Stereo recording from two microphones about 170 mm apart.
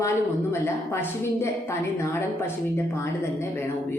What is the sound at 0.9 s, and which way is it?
Speech, 15° left (ahead or behind).